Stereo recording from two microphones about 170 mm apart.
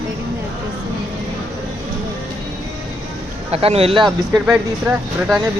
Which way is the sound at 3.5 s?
35° right (ahead or behind).